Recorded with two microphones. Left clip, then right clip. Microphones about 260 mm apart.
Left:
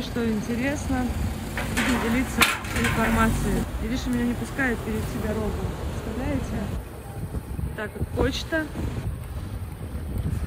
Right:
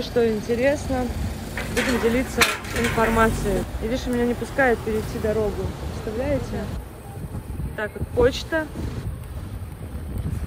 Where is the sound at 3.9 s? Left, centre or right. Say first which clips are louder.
Right 5 dB; centre.